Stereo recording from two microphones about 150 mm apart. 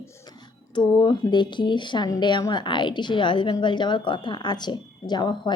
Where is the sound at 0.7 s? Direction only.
30° left (ahead or behind).